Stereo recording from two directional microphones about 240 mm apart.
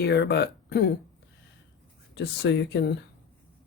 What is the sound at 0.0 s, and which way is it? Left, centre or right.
Speech, left.